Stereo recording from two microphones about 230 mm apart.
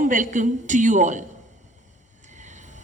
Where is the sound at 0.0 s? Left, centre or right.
Right.